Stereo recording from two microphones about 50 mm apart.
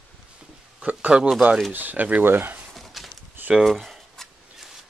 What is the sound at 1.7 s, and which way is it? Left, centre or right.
Speech, right.